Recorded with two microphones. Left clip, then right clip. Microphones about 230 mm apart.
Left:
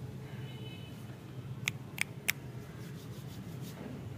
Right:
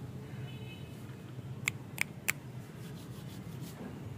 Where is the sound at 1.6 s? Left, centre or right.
Right.